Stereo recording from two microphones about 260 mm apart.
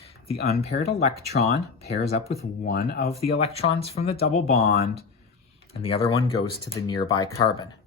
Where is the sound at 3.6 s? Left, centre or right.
Left.